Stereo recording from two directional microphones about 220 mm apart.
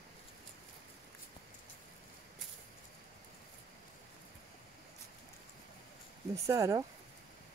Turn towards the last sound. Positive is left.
turn(degrees=-15)  # may be behind; listen again after turning